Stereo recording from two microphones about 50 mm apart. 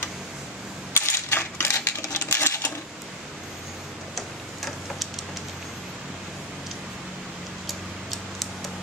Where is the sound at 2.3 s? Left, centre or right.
Left.